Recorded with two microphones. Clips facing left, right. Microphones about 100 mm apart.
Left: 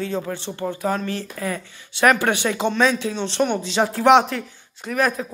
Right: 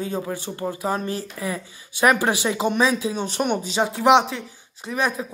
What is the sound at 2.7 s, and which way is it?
Speech, 10° right (ahead or behind).